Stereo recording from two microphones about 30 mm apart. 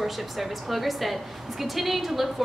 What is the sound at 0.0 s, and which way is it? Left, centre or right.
A woman's voice, centre.